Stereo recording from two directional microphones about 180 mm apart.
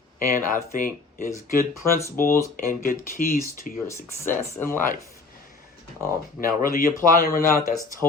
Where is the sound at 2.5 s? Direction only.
50° left (ahead or behind).